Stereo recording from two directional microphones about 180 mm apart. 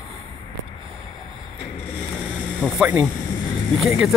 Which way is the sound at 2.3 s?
5° right (ahead or behind).